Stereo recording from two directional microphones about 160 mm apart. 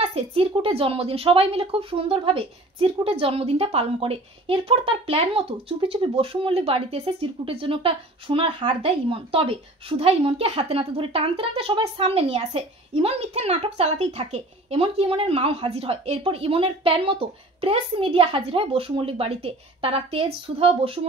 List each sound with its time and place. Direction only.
0.1 s speech: 35° right (ahead or behind)